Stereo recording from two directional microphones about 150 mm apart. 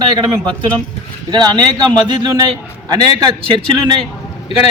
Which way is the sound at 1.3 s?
30° right (ahead or behind).